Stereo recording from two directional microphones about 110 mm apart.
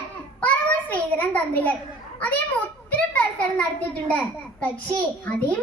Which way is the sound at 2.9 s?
10° left (ahead or behind).